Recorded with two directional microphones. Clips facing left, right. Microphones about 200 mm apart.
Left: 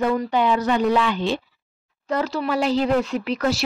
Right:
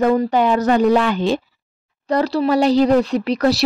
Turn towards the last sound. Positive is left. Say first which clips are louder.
# right 5 dB
turn(degrees=-40)  # may be behind; listen again after turning